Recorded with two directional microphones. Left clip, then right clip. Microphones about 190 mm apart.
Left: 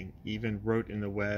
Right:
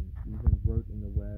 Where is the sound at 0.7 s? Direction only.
30° left (ahead or behind).